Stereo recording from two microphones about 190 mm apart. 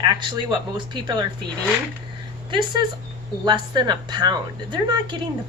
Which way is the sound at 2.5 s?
25° right (ahead or behind).